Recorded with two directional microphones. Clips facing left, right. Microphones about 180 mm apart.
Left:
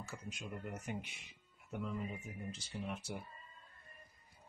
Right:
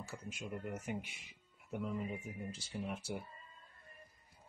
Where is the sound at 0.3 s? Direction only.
5° right (ahead or behind).